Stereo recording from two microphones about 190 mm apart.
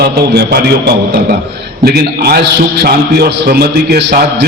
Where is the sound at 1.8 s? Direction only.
55° right (ahead or behind).